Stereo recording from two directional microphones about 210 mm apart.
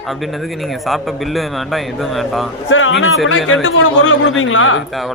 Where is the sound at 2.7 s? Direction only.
65° left (ahead or behind).